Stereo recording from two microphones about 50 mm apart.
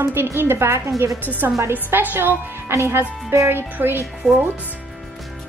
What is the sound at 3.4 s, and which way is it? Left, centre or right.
Speech, right.